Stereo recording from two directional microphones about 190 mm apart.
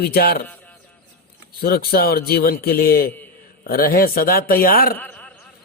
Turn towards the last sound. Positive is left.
turn(degrees=10)  # may be behind; listen again after turning